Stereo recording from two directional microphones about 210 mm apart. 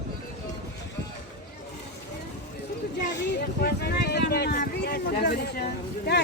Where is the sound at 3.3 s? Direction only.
50° left (ahead or behind).